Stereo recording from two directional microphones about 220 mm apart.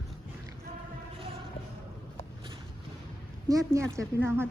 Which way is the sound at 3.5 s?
15° right (ahead or behind).